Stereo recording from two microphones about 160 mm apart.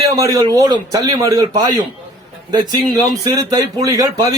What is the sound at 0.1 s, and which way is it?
A man's voice, 20° right (ahead or behind).